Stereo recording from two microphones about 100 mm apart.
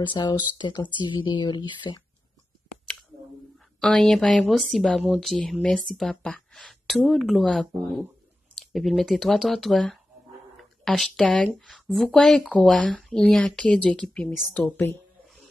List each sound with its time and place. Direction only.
0.0 s speech: 50° left (ahead or behind)
3.8 s a woman's voice: 5° left (ahead or behind)